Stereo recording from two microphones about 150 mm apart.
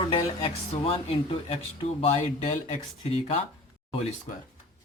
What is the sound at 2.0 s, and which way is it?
Speech, 50° left (ahead or behind).